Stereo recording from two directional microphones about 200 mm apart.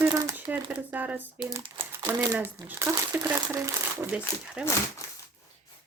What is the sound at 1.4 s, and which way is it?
Speech, 20° right (ahead or behind).